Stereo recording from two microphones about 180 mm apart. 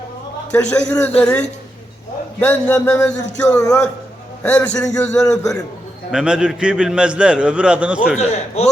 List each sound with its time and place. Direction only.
0.5 s a man's voice: 5° left (ahead or behind)
8.2 s a man's voice: 40° left (ahead or behind)